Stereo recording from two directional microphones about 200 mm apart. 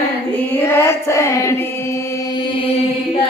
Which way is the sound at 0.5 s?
10° left (ahead or behind).